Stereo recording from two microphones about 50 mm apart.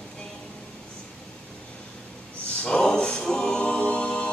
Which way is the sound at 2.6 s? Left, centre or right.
Centre.